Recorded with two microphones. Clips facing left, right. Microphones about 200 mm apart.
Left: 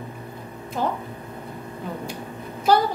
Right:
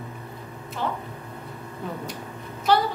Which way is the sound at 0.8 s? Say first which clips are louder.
Left 4 dB; 45° left (ahead or behind).